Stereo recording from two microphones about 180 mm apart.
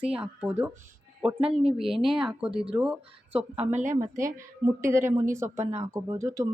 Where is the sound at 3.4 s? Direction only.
40° right (ahead or behind).